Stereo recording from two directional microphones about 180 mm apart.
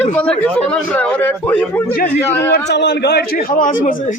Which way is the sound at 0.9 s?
10° left (ahead or behind).